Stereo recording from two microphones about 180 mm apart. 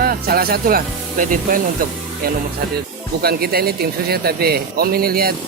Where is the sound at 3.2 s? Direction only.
60° right (ahead or behind).